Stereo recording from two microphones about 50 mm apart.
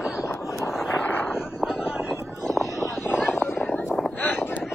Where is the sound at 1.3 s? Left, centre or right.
Centre.